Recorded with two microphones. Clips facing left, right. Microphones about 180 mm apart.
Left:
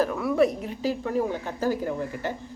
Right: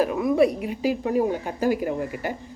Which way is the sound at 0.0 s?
15° right (ahead or behind).